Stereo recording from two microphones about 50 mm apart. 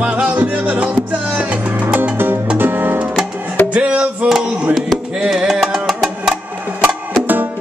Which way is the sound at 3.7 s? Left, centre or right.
Right.